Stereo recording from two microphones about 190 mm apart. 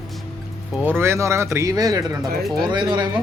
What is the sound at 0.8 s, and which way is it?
Speech, 10° right (ahead or behind).